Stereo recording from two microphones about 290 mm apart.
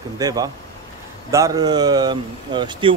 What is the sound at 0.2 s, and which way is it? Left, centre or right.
Speech, centre.